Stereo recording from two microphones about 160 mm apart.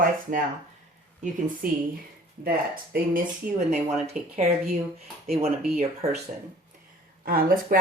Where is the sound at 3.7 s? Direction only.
40° right (ahead or behind).